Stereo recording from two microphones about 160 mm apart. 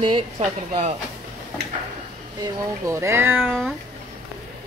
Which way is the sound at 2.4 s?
15° right (ahead or behind).